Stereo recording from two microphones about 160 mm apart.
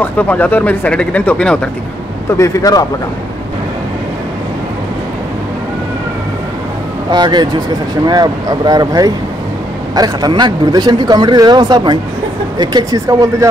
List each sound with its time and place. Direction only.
0.0 s speech: 10° left (ahead or behind)
2.3 s a man's voice: 20° left (ahead or behind)
7.1 s speech: 25° right (ahead or behind)